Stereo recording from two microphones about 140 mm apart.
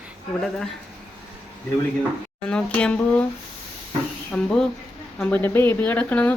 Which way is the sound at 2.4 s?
10° left (ahead or behind).